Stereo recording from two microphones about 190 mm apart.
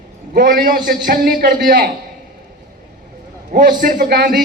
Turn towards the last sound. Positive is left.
turn(degrees=-55)  # may be behind; listen again after turning